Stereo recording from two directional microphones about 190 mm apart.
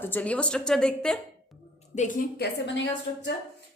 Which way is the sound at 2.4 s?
70° left (ahead or behind).